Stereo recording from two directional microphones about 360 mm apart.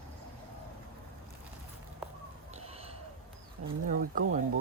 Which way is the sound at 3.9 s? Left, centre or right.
Right.